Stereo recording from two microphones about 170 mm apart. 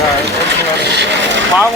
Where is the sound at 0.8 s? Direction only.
80° right.